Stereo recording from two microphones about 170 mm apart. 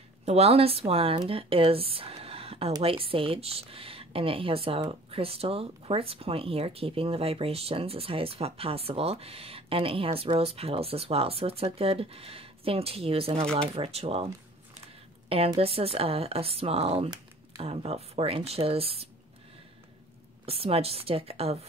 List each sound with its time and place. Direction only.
0.2 s speech: 40° right (ahead or behind)
20.4 s speech: 35° right (ahead or behind)